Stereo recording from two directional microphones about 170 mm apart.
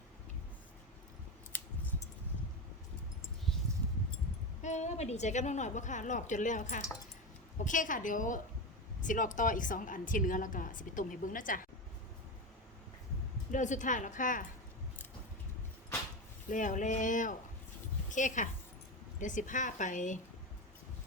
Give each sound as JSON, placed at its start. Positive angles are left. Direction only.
{"t": 4.6, "sound": "a woman's voice", "side_deg": 45}
{"t": 13.5, "sound": "a woman's voice", "side_deg": 45}
{"t": 16.5, "sound": "a woman's voice", "side_deg": 50}